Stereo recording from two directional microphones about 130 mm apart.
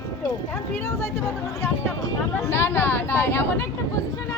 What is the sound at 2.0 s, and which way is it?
Speech, 20° left (ahead or behind).